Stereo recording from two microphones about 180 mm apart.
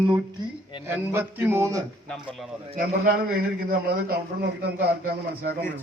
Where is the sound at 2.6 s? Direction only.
45° right (ahead or behind); by 4.9 s 65° right (ahead or behind).